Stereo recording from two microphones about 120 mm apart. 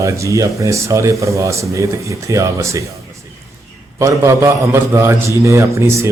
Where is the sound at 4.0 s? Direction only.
25° right (ahead or behind).